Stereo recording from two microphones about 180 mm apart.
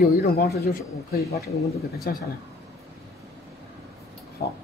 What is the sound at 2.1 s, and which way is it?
Speech, 55° left (ahead or behind).